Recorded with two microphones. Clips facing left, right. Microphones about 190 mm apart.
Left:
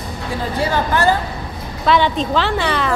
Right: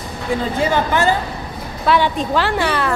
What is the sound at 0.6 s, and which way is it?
A woman's voice, 20° right (ahead or behind).